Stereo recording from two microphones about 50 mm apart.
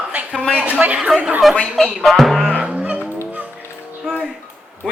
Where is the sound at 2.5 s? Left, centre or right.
Right.